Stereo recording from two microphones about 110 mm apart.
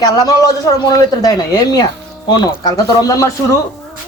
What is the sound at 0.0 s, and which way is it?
A man's voice, 35° left (ahead or behind).